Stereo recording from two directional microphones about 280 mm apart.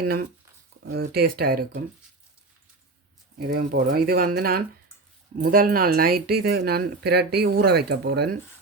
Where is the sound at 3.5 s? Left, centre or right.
Right.